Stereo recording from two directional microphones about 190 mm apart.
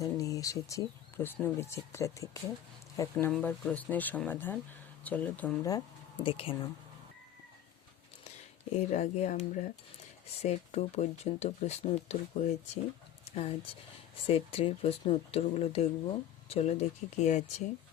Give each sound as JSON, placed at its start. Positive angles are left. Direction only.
{"t": 0.0, "sound": "speech", "side_deg": 20}
{"t": 6.2, "sound": "speech", "side_deg": 25}
{"t": 8.9, "sound": "speech", "side_deg": 40}